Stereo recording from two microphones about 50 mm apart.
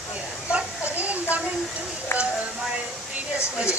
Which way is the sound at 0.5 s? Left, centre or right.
Right.